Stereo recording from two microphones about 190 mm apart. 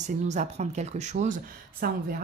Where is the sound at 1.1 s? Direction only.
50° right (ahead or behind).